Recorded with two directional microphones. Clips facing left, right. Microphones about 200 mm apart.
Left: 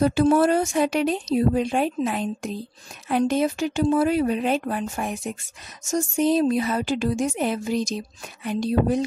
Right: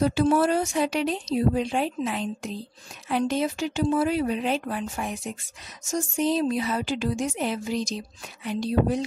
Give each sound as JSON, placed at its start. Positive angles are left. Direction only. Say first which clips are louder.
{"t": 0.0, "sound": "speech", "louder": "left 3 dB", "side_deg": 50}